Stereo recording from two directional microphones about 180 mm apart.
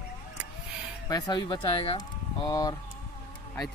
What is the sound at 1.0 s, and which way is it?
Speech, 20° left (ahead or behind).